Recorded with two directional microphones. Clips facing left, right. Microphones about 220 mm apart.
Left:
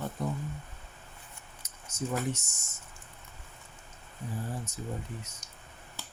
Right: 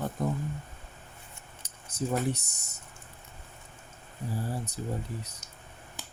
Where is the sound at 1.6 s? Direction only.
35° right (ahead or behind).